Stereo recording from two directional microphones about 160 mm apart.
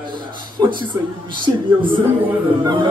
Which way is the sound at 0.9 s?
30° right (ahead or behind).